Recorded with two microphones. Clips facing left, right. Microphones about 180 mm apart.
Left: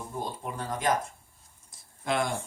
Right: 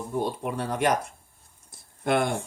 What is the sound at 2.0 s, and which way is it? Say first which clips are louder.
Speech: right 5 dB; 60° right (ahead or behind).